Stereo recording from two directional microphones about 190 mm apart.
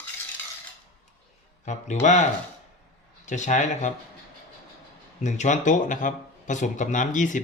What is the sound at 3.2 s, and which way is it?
Speech, 40° left (ahead or behind).